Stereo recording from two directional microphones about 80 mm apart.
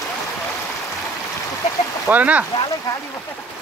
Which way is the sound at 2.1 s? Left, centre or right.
Centre.